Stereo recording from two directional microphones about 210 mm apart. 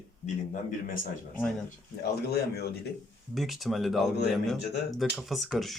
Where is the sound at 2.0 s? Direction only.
50° left (ahead or behind).